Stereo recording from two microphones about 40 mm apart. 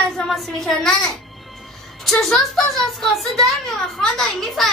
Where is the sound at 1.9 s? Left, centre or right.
Centre.